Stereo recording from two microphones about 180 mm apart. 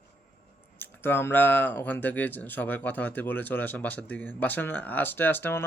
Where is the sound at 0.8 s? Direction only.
10° left (ahead or behind).